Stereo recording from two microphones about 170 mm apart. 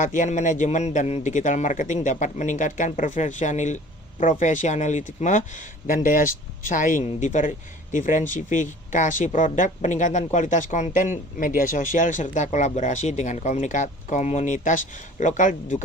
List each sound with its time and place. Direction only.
0.0 s speech: 50° left (ahead or behind)